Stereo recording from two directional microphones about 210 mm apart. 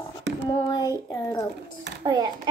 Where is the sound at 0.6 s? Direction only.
20° left (ahead or behind).